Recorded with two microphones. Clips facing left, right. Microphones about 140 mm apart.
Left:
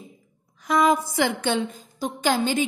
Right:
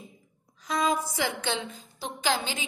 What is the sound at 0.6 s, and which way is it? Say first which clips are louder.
A woman's voice: left 7 dB; 60° left (ahead or behind).